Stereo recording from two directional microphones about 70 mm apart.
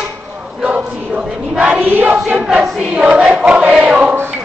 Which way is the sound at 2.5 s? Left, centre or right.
Centre.